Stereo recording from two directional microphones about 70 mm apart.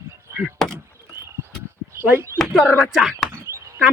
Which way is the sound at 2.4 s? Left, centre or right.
Centre.